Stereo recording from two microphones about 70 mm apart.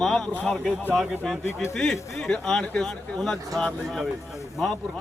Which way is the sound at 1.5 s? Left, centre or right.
Left.